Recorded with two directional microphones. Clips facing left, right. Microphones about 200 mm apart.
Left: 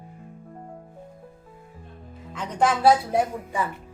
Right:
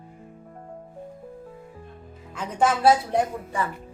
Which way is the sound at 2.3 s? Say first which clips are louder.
Even; 5° right (ahead or behind).